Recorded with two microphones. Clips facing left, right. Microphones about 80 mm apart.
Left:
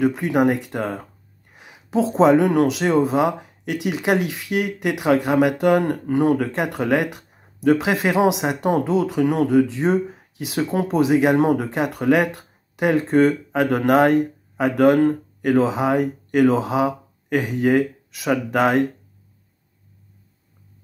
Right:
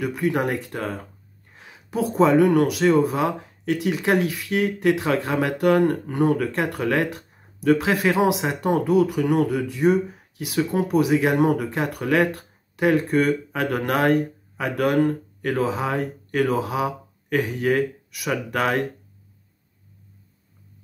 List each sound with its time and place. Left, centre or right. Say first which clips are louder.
0.0 s speech: left 5 dB; left